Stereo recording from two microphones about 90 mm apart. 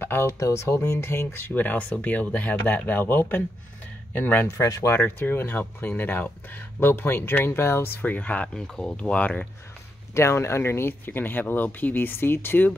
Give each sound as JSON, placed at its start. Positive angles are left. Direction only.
{"t": 0.0, "sound": "speech", "side_deg": 25}
{"t": 4.5, "sound": "speech", "side_deg": 40}
{"t": 4.9, "sound": "speech", "side_deg": 20}
{"t": 10.1, "sound": "speech", "side_deg": 30}